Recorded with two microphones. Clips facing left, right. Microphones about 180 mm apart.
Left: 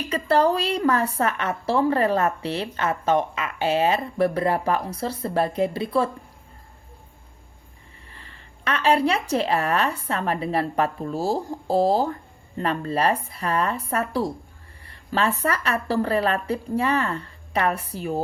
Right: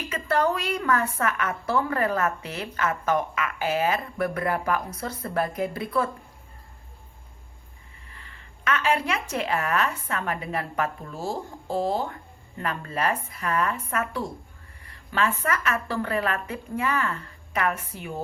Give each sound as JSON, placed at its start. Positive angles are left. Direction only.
{"t": 0.1, "sound": "a woman's voice", "side_deg": 35}
{"t": 8.1, "sound": "a woman's voice", "side_deg": 35}